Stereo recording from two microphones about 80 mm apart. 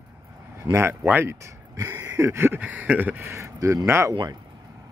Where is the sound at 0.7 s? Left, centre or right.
Right.